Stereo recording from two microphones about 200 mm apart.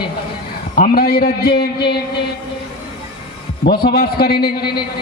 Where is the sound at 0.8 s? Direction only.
50° left (ahead or behind).